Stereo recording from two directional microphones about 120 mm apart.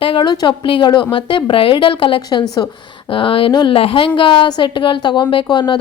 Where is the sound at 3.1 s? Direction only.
45° left (ahead or behind).